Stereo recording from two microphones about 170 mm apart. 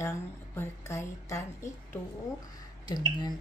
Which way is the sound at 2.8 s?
25° left (ahead or behind).